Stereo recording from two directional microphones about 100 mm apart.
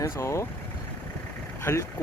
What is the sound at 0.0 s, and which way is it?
Speech, 30° left (ahead or behind).